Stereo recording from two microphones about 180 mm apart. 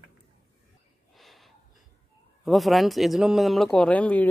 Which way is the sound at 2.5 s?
Centre (ahead or behind).